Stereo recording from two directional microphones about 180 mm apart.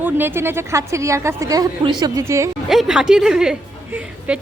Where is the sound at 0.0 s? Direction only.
10° right (ahead or behind).